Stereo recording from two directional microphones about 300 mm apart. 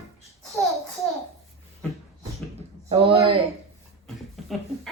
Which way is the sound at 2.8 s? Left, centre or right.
Centre.